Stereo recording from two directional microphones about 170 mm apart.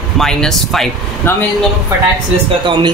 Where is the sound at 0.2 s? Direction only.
5° left (ahead or behind).